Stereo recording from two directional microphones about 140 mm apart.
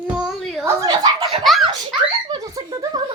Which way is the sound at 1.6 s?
35° right (ahead or behind).